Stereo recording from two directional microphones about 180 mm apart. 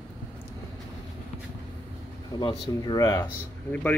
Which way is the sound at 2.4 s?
25° left (ahead or behind).